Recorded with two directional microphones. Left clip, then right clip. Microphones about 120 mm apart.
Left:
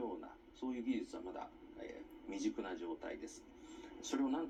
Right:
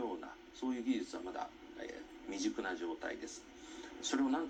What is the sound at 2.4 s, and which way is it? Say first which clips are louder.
Speech: right 3 dB; 5° left (ahead or behind).